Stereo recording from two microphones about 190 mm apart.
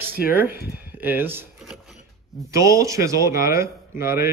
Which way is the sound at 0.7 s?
10° right (ahead or behind).